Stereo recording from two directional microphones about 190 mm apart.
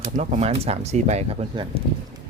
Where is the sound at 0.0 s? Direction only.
35° right (ahead or behind).